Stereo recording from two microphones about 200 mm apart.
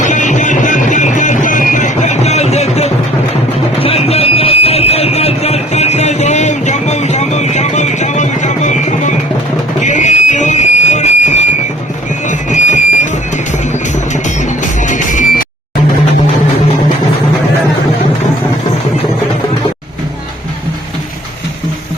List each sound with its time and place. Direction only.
0.0 s music: 40° left (ahead or behind)
3.8 s a sound: 30° left (ahead or behind)
14.6 s music: 40° left (ahead or behind)